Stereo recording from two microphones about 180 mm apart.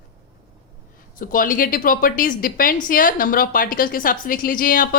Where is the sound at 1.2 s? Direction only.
50° left (ahead or behind).